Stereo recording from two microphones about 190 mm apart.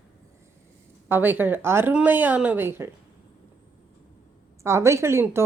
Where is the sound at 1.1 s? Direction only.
10° right (ahead or behind).